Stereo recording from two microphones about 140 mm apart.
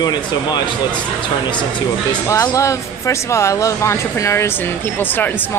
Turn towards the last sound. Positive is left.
turn(degrees=15)  # may be behind; listen again after turning